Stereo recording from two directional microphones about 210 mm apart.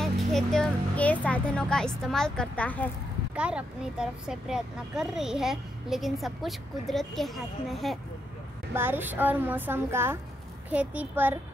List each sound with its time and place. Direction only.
0.0 s speech: centre (ahead or behind)
3.3 s speech: 5° right (ahead or behind)
8.7 s speech: 10° right (ahead or behind)